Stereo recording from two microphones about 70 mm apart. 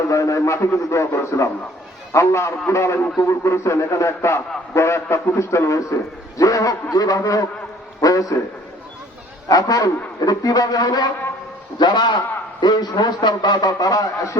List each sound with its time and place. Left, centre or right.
0.1 s a man's voice: left
9.5 s a man's voice: left
11.8 s a man's voice: left